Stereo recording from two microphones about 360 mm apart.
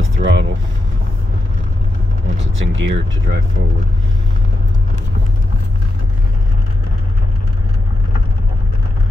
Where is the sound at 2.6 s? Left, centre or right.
Right.